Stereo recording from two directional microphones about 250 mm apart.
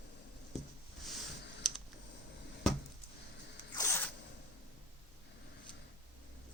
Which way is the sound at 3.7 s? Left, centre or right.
Centre.